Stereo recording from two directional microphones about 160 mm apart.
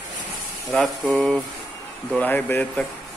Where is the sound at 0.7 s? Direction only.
5° left (ahead or behind).